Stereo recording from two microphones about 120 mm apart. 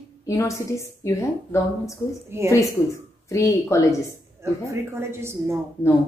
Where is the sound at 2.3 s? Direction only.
20° right (ahead or behind).